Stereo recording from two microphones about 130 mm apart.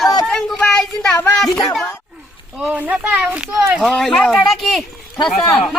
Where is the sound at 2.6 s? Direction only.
10° right (ahead or behind).